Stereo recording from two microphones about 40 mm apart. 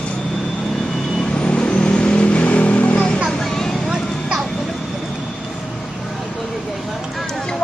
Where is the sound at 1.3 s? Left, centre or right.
Left.